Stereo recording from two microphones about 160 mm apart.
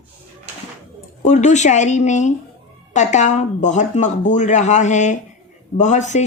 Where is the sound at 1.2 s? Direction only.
50° left (ahead or behind).